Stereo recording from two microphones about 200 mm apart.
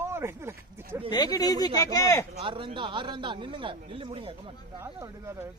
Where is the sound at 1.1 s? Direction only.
20° left (ahead or behind).